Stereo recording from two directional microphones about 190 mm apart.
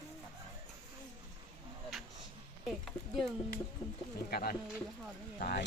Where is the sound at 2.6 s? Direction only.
Centre (ahead or behind).